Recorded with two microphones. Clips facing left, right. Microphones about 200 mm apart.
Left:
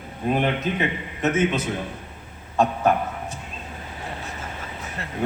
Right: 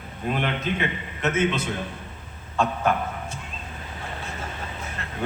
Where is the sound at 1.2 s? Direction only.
15° left (ahead or behind).